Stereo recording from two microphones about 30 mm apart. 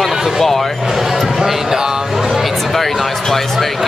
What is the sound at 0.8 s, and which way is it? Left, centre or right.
Speech, centre.